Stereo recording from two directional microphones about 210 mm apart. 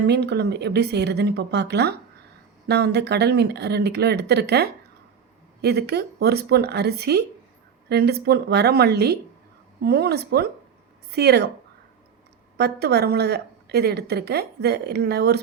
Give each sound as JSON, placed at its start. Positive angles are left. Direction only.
{"t": 0.1, "sound": "a woman's voice", "side_deg": -55}
{"t": 12.5, "sound": "a woman's voice", "side_deg": -50}